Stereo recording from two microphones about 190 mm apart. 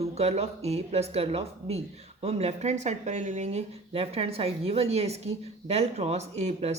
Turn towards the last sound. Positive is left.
turn(degrees=-35)  # may be behind; listen again after turning